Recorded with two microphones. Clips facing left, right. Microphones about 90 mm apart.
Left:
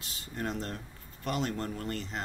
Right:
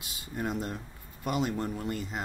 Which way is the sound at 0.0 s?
10° right (ahead or behind).